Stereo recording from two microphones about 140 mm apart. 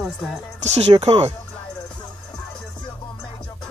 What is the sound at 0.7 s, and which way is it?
Speech, 45° right (ahead or behind).